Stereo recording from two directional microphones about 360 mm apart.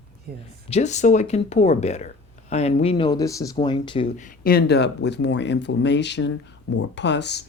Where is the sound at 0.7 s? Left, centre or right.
Centre.